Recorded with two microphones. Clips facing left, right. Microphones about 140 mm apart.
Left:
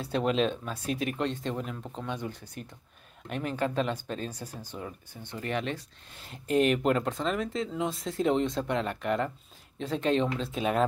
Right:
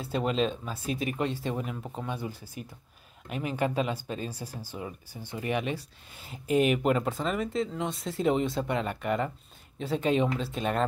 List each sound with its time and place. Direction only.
0.0 s speech: centre (ahead or behind)